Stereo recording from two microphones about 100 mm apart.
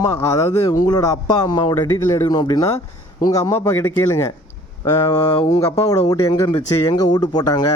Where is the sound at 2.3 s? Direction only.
45° left (ahead or behind); by 4.1 s 25° left (ahead or behind).